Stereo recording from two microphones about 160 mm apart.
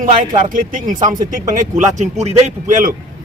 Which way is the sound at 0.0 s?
55° right (ahead or behind).